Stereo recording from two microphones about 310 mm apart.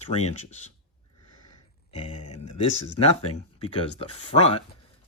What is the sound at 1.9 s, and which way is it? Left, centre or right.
Speech, centre.